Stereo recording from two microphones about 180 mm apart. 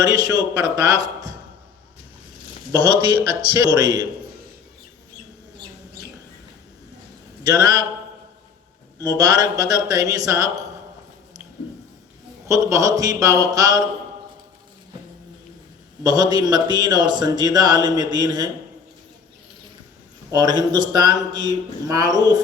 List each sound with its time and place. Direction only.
0.0 s a man's voice: 20° right (ahead or behind)
2.7 s a man's voice: 25° right (ahead or behind)
7.4 s a man's voice: 20° right (ahead or behind)
9.0 s a man's voice: 20° right (ahead or behind)
12.5 s a man's voice: 20° right (ahead or behind)
16.0 s a man's voice: 20° right (ahead or behind)
20.3 s a man's voice: 20° right (ahead or behind)